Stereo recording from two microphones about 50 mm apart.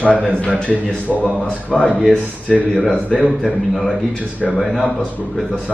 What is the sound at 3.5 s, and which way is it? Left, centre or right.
A woman's voice, centre.